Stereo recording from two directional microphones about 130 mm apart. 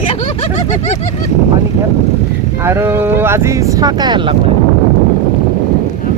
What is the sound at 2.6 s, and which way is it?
Speech, 20° right (ahead or behind).